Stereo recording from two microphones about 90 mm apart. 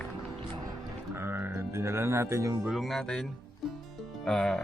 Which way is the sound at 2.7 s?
Centre (ahead or behind).